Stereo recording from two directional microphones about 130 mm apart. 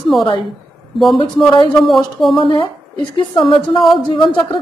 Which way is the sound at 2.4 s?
40° left (ahead or behind).